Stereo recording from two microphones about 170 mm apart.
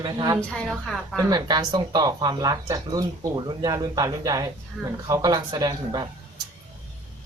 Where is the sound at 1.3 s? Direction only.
25° right (ahead or behind).